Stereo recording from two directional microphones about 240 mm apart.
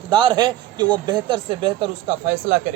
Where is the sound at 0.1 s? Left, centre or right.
Centre.